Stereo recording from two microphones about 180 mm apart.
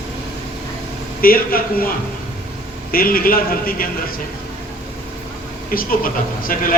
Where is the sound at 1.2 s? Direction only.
55° left (ahead or behind).